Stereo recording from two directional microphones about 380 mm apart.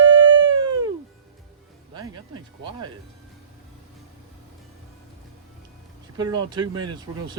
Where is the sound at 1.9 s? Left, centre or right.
Centre.